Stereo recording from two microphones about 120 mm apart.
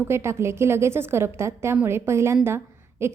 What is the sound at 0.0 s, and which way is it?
A woman's voice, 20° right (ahead or behind).